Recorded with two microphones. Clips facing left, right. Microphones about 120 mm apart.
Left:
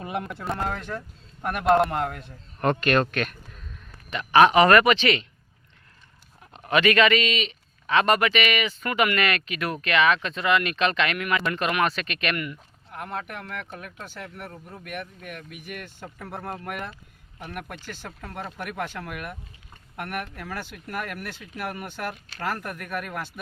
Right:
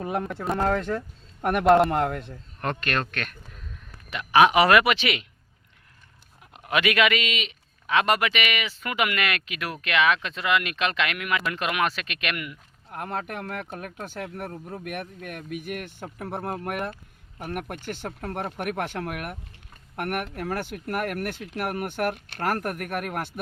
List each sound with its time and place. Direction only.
0.0 s a man's voice: 10° left (ahead or behind)
3.1 s a sound: 5° left (ahead or behind)
4.1 s speech: 5° right (ahead or behind)
6.5 s a man's voice: 5° right (ahead or behind)
12.9 s speech: 50° right (ahead or behind)